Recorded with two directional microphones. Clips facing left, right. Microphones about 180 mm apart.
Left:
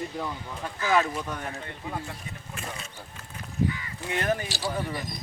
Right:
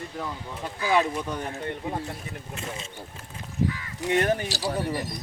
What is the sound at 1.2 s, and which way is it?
Speech, centre (ahead or behind).